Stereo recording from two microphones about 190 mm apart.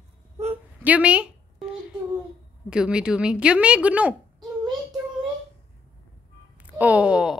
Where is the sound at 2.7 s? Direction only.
5° right (ahead or behind).